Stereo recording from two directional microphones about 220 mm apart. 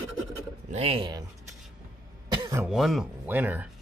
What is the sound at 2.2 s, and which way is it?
Throat clearing, 20° right (ahead or behind).